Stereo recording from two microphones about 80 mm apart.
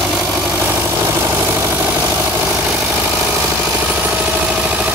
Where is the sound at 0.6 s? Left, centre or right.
Right.